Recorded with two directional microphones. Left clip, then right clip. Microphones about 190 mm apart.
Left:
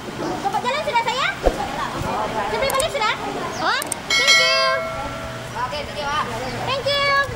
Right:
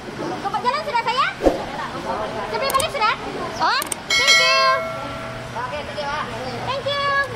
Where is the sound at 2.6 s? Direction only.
25° right (ahead or behind).